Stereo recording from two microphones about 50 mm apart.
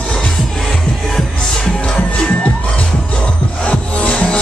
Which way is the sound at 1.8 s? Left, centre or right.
Centre.